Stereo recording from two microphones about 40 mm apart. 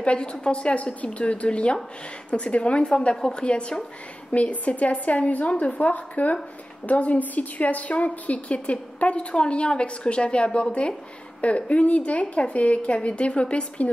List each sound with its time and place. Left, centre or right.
0.0 s a woman's voice: left
3.2 s a woman's voice: centre
3.4 s a woman's voice: left